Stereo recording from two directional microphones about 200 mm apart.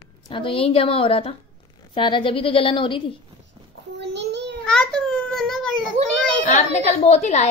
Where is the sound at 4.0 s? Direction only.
60° right (ahead or behind).